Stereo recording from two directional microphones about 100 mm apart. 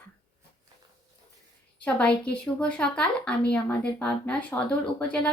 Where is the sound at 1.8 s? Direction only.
10° left (ahead or behind).